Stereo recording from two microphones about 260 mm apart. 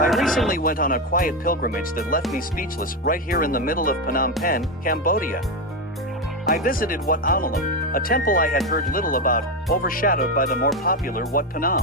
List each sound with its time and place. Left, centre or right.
0.1 s a sound: centre
0.4 s speech: left
6.7 s speech: left